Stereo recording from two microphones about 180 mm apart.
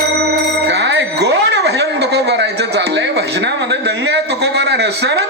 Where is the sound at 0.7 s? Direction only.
80° right.